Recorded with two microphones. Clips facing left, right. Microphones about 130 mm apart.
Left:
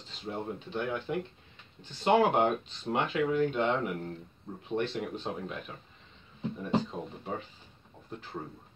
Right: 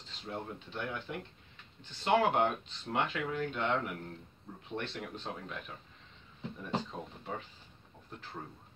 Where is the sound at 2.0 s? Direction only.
15° left (ahead or behind).